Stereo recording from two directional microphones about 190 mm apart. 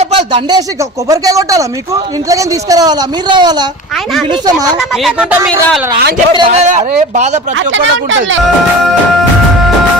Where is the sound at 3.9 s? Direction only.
Centre (ahead or behind).